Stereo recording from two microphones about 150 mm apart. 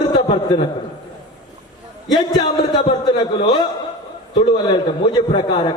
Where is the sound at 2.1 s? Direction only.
25° left (ahead or behind).